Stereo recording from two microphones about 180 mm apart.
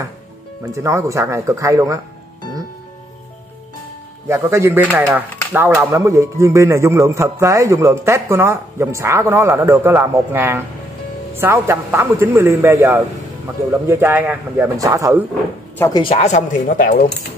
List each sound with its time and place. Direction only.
0.7 s speech: 15° right (ahead or behind)
4.3 s speech: 15° right (ahead or behind)
15.8 s speech: 25° left (ahead or behind); by 17.1 s 55° left (ahead or behind)